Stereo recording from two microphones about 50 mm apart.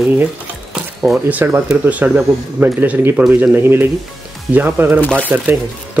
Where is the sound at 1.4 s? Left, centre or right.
Right.